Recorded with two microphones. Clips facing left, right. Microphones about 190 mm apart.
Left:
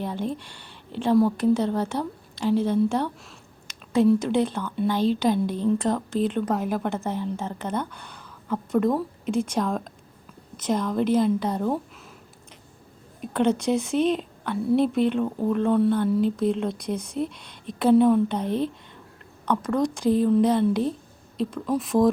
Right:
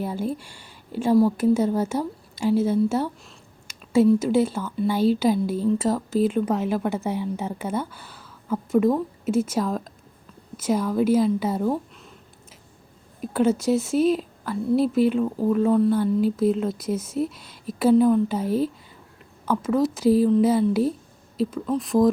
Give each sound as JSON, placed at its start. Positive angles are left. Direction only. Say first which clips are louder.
{"t": 0.0, "sound": "a woman's voice", "louder": "right 2 dB", "side_deg": -10}
{"t": 13.2, "sound": "a woman's voice", "louder": "right 2 dB", "side_deg": -5}